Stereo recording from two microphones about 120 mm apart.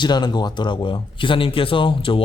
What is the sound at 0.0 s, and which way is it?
Speech, 35° left (ahead or behind).